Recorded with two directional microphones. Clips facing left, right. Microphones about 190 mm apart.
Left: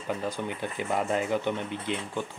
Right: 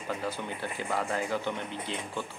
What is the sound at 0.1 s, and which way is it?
Speech, 15° left (ahead or behind).